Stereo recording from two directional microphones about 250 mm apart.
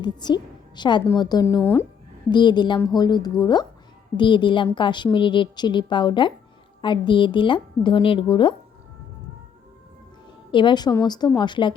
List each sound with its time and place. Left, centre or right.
0.0 s a woman's voice: centre
10.5 s speech: centre